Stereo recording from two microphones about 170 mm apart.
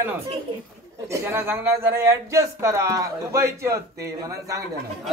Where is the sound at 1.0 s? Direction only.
15° right (ahead or behind).